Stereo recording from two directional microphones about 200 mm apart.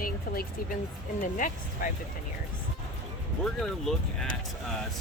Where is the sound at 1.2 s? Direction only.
40° left (ahead or behind).